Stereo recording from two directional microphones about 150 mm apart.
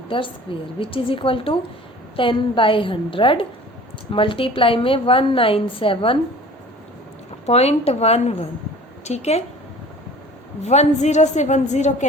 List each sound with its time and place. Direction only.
0.1 s a woman's voice: 35° left (ahead or behind)
7.4 s a woman's voice: 45° left (ahead or behind)
10.7 s a woman's voice: 50° left (ahead or behind)